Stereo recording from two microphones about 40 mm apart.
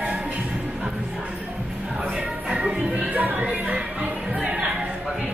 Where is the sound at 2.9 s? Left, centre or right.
Right.